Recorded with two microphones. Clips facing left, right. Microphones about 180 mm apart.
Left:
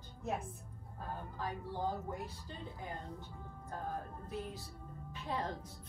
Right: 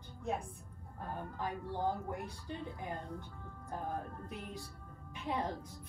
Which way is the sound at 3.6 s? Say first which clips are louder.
Right 2 dB; 15° right (ahead or behind).